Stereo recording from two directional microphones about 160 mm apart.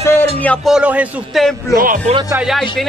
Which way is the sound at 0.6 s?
5° right (ahead or behind).